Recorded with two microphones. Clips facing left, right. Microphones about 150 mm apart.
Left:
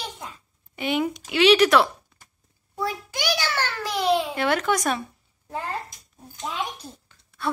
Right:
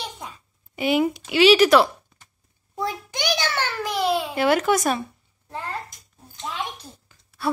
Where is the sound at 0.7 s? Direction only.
5° right (ahead or behind).